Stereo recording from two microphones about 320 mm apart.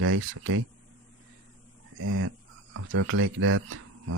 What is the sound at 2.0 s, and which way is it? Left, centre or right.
Speech, right.